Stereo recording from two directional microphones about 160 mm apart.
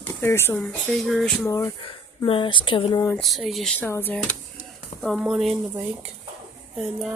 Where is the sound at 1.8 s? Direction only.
30° left (ahead or behind).